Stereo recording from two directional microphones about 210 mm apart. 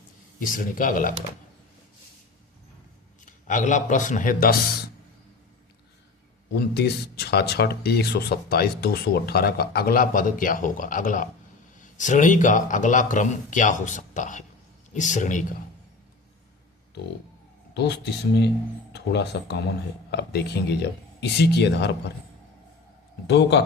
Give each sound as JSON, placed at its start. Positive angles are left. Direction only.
{"t": 0.3, "sound": "speech", "side_deg": 40}
{"t": 3.2, "sound": "speech", "side_deg": 35}
{"t": 6.6, "sound": "speech", "side_deg": 50}
{"t": 17.7, "sound": "speech", "side_deg": 55}
{"t": 23.2, "sound": "a man's voice", "side_deg": 55}